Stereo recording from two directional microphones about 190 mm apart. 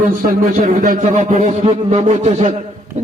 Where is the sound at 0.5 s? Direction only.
45° right (ahead or behind).